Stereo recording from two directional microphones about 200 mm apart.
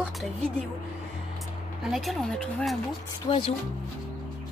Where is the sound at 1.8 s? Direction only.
Centre (ahead or behind).